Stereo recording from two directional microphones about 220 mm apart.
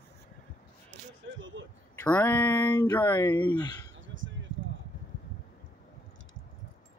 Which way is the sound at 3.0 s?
20° left (ahead or behind).